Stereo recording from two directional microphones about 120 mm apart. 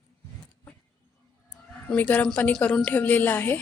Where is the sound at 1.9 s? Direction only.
15° left (ahead or behind).